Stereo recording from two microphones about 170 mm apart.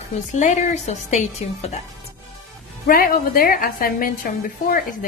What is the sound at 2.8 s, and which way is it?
A woman's voice, 60° left (ahead or behind).